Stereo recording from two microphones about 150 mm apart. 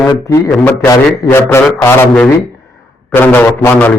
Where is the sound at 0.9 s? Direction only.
20° left (ahead or behind).